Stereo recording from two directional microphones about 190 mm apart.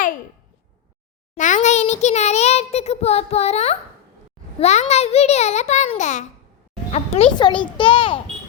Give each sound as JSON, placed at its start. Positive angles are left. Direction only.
{"t": 1.4, "sound": "a child's voice", "side_deg": 40}
{"t": 7.3, "sound": "a child's voice", "side_deg": 25}